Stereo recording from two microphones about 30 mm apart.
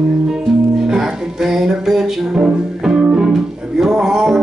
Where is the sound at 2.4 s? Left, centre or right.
Right.